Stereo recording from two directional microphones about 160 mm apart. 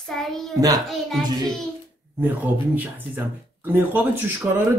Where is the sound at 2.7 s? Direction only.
10° right (ahead or behind).